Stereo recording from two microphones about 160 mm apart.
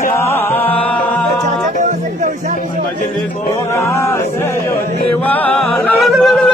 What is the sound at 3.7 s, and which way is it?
Music, 20° left (ahead or behind).